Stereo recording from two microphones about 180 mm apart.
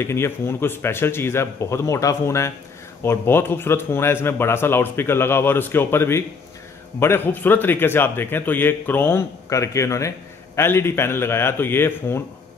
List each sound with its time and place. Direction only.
0.0 s a man's voice: 15° left (ahead or behind)